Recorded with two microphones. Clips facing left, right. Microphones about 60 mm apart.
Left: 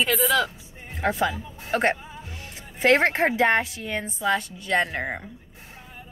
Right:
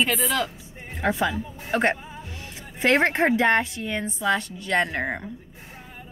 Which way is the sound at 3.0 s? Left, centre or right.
Centre.